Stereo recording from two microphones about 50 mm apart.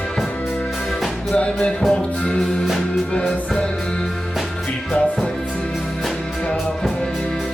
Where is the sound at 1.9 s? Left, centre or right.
Centre.